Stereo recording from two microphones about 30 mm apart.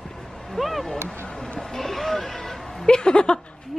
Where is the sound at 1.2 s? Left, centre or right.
Centre.